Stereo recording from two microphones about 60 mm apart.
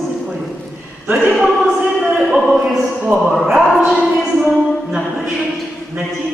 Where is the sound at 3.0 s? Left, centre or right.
Centre.